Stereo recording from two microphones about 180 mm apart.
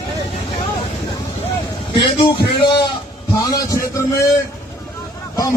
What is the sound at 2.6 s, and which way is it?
Music, 25° left (ahead or behind).